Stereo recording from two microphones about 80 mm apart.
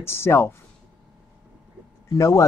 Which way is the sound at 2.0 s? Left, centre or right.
Left.